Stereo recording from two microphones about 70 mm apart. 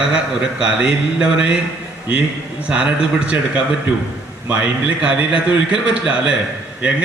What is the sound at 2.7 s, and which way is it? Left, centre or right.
Speech, centre.